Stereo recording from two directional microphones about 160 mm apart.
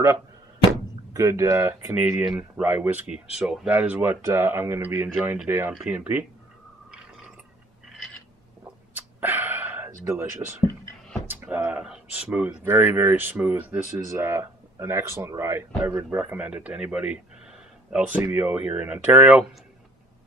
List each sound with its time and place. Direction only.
1.1 s speech: 20° right (ahead or behind)
8.9 s a sound: 10° right (ahead or behind)
11.2 s speech: 10° right (ahead or behind)